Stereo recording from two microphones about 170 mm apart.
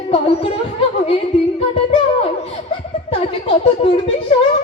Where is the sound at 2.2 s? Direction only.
35° left (ahead or behind).